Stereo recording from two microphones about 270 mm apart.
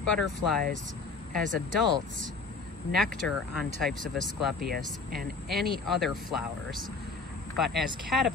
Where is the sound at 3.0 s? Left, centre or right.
Centre.